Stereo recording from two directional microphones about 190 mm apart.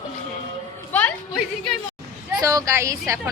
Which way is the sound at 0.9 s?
10° left (ahead or behind).